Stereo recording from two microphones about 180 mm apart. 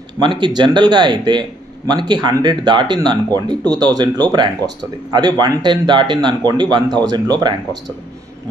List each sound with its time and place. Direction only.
0.2 s speech: 25° right (ahead or behind)